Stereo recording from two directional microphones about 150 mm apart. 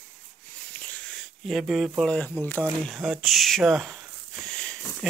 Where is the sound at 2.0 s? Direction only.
5° left (ahead or behind).